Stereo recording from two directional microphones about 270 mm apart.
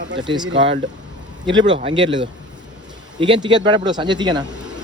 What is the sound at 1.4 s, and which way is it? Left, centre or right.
Speech, centre.